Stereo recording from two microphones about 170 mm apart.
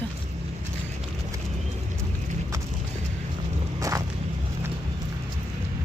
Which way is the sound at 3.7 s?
20° right (ahead or behind).